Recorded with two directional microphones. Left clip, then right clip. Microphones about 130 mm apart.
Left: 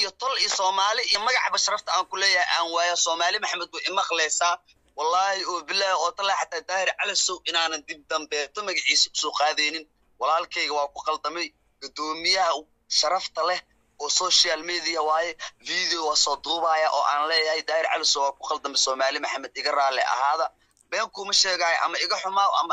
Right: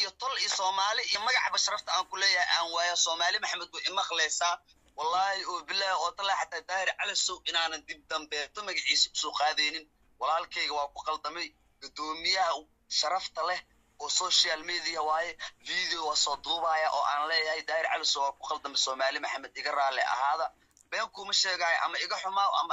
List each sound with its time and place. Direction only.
0.0 s speech: 30° left (ahead or behind)